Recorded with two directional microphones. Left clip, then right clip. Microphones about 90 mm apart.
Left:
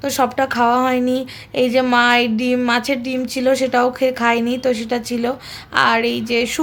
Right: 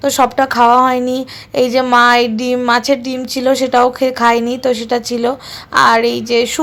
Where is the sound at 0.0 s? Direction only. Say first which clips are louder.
Right 5 dB; 25° right (ahead or behind).